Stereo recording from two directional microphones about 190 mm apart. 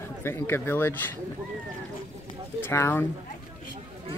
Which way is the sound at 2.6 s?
10° left (ahead or behind).